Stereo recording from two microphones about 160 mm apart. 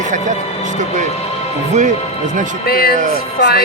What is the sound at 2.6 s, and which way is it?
Speech, 70° left (ahead or behind).